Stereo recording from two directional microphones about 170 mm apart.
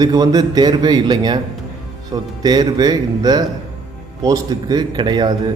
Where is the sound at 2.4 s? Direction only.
25° right (ahead or behind).